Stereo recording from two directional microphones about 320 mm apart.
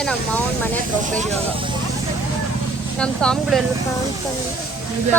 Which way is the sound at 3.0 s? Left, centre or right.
Centre.